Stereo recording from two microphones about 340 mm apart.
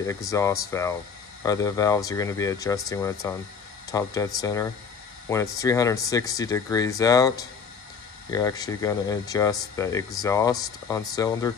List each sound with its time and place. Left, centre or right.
0.0 s speech: centre